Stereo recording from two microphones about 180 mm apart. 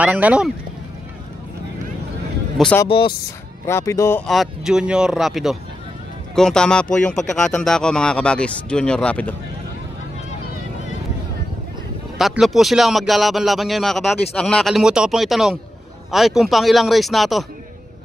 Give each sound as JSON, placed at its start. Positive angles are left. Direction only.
{"t": 0.0, "sound": "speech", "side_deg": -10}
{"t": 2.5, "sound": "speech", "side_deg": 5}
{"t": 2.9, "sound": "speech", "side_deg": 30}
{"t": 3.6, "sound": "speech", "side_deg": 15}
{"t": 4.3, "sound": "speech", "side_deg": 0}
{"t": 12.2, "sound": "speech", "side_deg": 0}